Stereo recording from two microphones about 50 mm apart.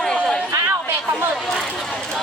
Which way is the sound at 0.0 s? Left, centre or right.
Centre.